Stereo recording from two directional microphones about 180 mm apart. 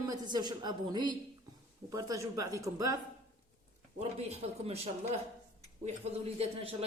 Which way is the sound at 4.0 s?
35° right (ahead or behind).